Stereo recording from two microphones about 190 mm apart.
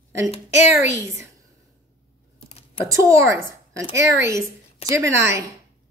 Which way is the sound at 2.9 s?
15° right (ahead or behind).